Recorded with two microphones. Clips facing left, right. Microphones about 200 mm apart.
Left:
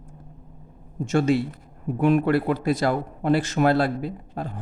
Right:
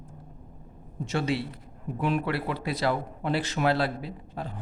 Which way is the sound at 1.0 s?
45° left (ahead or behind).